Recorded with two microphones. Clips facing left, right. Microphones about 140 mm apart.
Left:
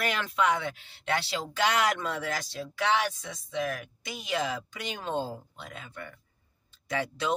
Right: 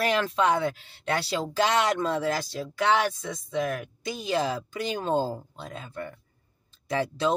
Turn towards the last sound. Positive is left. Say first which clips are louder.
# right 5 dB
turn(degrees=-30)  # may be behind; listen again after turning